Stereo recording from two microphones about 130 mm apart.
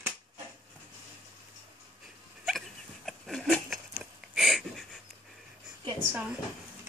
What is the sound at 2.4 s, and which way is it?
Dog, centre (ahead or behind).